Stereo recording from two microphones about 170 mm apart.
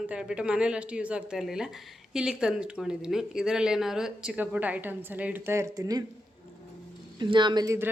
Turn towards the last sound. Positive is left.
turn(degrees=-20)  # may be behind; listen again after turning